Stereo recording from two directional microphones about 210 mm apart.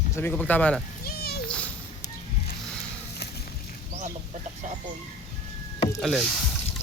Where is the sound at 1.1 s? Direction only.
50° left (ahead or behind).